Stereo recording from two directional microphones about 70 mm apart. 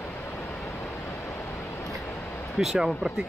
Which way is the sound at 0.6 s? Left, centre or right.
Left.